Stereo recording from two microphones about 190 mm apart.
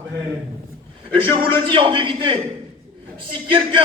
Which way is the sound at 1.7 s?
25° right (ahead or behind).